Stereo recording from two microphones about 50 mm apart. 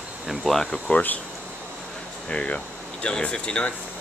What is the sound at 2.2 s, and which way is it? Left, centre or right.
Speech, left.